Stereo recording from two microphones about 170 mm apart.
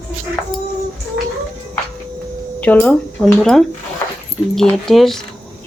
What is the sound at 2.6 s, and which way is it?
Speech, 10° left (ahead or behind).